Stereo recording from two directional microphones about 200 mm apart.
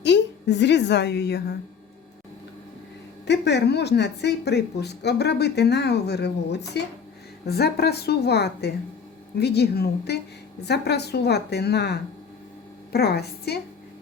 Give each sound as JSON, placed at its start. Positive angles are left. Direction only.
{"t": 0.0, "sound": "a woman's voice", "side_deg": 60}
{"t": 3.2, "sound": "a woman's voice", "side_deg": 55}